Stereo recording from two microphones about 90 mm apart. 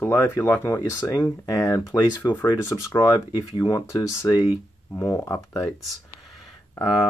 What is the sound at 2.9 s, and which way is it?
Speech, 50° left (ahead or behind).